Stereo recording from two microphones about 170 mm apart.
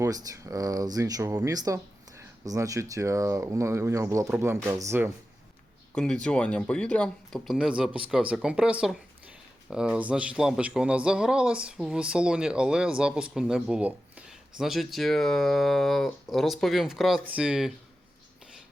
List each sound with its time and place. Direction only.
0.0 s speech: 20° right (ahead or behind)
5.9 s speech: 5° left (ahead or behind)